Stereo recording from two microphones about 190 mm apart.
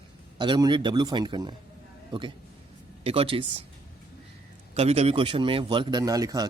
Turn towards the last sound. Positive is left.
turn(degrees=-20)  # may be behind; listen again after turning